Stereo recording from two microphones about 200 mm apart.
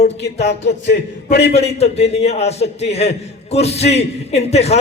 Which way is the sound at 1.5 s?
30° left (ahead or behind).